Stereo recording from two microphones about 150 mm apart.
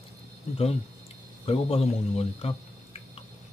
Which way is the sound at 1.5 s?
40° left (ahead or behind).